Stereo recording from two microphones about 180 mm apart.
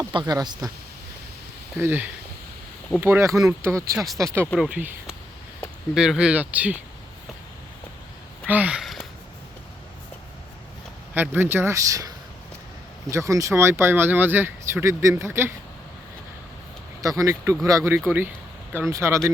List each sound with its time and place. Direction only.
0.1 s speech: 25° right (ahead or behind)
1.8 s speech: 10° right (ahead or behind)
3.9 s speech: centre (ahead or behind)
4.2 s speech: 15° right (ahead or behind)
8.4 s a sound: 10° right (ahead or behind)
11.1 s speech: 10° right (ahead or behind)
17.0 s speech: 20° right (ahead or behind)